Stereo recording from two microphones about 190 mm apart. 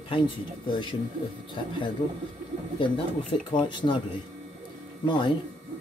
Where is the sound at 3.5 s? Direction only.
25° left (ahead or behind).